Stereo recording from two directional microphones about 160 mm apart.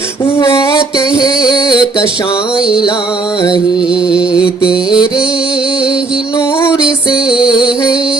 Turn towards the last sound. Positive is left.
turn(degrees=-5)  # may be behind; listen again after turning